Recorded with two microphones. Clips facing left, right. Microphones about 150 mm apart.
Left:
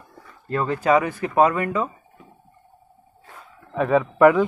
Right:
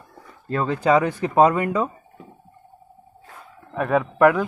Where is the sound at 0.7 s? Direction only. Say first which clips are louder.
Right 1 dB; 10° left (ahead or behind).